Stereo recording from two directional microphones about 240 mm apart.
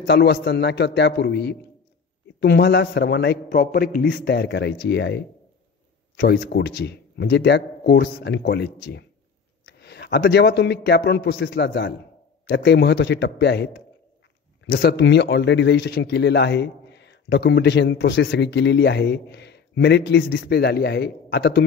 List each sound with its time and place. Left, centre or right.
0.0 s a man's voice: left